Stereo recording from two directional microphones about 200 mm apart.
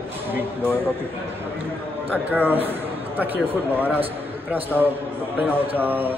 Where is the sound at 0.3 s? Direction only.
10° right (ahead or behind).